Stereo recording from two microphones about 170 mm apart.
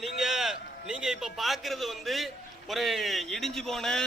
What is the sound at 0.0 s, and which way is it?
A man's voice, centre (ahead or behind).